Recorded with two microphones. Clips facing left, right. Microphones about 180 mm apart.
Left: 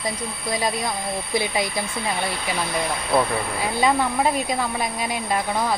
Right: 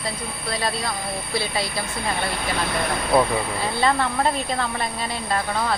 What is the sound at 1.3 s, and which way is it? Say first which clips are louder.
Speech: left 3 dB; 15° left (ahead or behind).